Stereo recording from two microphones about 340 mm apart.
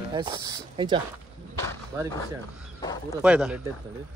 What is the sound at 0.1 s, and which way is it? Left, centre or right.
Speech, centre.